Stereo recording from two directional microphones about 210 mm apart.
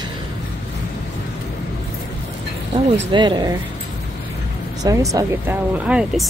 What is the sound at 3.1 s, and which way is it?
Speech, 20° right (ahead or behind).